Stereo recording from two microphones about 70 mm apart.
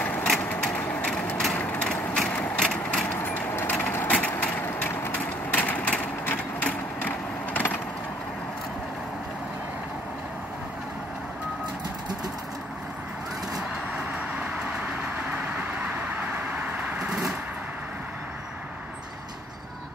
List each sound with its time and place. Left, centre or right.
0.0 s a sound: left
1.5 s vehicle: centre
3.2 s vehicle: left
4.6 s a sound: left
13.6 s vehicle: centre
16.9 s vehicle: centre